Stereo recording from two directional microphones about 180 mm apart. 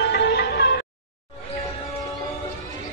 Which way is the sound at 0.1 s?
65° left (ahead or behind).